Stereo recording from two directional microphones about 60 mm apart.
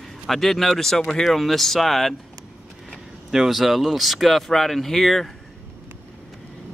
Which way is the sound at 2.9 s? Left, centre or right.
Centre.